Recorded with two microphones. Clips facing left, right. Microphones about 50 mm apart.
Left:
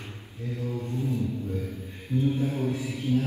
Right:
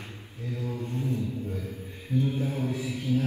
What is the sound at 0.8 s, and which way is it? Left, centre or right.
Mantra, right.